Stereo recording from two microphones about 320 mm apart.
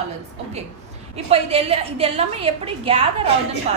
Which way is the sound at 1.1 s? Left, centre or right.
Centre.